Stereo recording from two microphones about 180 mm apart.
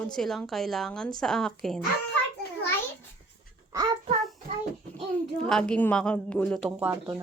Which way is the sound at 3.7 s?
20° right (ahead or behind).